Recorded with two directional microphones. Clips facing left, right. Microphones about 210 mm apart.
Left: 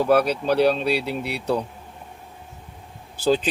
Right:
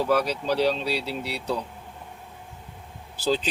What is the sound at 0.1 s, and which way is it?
Speech, 55° left (ahead or behind).